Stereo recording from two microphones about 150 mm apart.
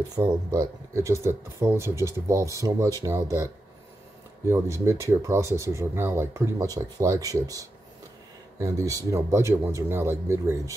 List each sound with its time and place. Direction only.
0.1 s speech: 25° right (ahead or behind)
4.5 s speech: 20° right (ahead or behind)